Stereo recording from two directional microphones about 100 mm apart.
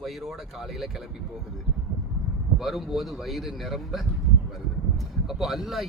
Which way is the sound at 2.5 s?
Centre (ahead or behind).